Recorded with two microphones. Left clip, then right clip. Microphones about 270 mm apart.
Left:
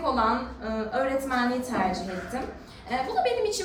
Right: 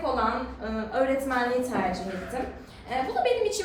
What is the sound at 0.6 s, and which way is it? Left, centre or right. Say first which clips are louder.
Speech: even; centre.